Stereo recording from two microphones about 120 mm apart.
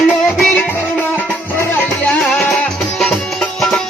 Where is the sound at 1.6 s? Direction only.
15° left (ahead or behind).